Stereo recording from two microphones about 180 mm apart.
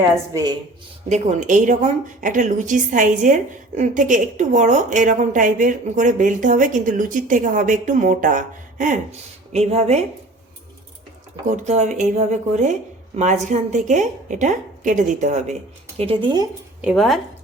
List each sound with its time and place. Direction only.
1.1 s a woman's voice: 40° right (ahead or behind)
11.4 s a woman's voice: 40° right (ahead or behind)
16.0 s a woman's voice: 30° right (ahead or behind)
16.8 s speech: centre (ahead or behind)